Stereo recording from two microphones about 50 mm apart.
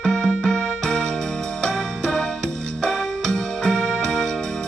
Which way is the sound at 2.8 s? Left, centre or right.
Centre.